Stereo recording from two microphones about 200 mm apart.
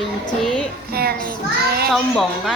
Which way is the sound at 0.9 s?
50° right (ahead or behind).